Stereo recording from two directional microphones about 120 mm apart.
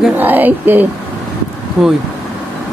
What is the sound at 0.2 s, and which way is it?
Speech, 15° right (ahead or behind).